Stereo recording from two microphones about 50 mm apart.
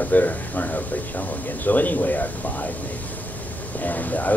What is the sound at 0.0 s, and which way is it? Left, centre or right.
Speech, left.